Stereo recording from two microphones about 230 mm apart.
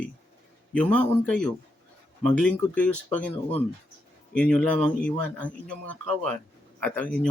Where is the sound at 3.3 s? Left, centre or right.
Left.